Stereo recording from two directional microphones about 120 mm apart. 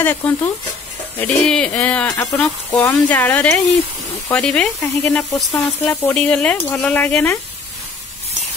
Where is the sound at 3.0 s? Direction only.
10° left (ahead or behind).